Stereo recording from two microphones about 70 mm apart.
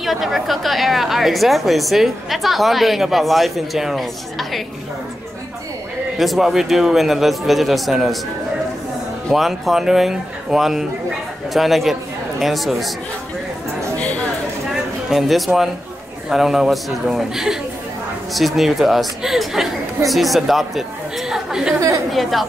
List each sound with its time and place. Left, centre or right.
0.0 s a woman's voice: centre
6.1 s a woman's voice: centre
9.3 s a woman's voice: centre
14.7 s a sound: centre
16.3 s a woman's voice: centre
21.7 s a woman's voice: right
22.1 s a woman's voice: centre